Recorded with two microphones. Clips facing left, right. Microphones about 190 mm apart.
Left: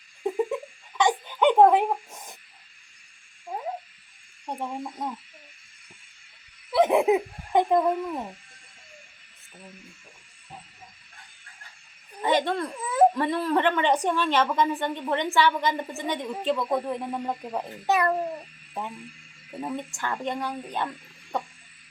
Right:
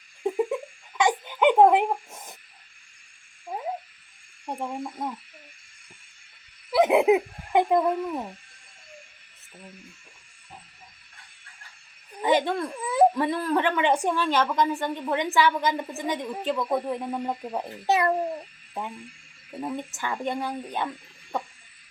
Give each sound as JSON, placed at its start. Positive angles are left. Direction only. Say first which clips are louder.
{"t": 0.2, "sound": "giggle", "louder": "right 1 dB", "side_deg": -10}
{"t": 3.5, "sound": "a sound", "louder": "even", "side_deg": -5}
{"t": 4.5, "sound": "speech", "louder": "right 1 dB", "side_deg": -5}
{"t": 6.7, "sound": "speech", "louder": "right 1 dB", "side_deg": -10}
{"t": 12.2, "sound": "a woman's voice", "louder": "right 1 dB", "side_deg": -5}
{"t": 17.8, "sound": "a child's voice", "louder": "right 1 dB", "side_deg": -20}
{"t": 19.5, "sound": "a woman's voice", "louder": "even", "side_deg": 0}